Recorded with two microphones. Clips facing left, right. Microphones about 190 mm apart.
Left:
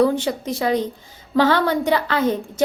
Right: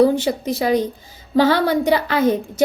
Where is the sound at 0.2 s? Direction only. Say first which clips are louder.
Right 2 dB; 10° right (ahead or behind).